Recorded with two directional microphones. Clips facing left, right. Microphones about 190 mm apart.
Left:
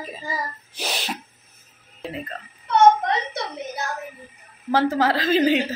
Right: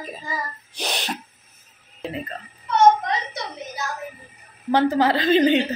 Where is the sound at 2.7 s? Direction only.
55° left (ahead or behind).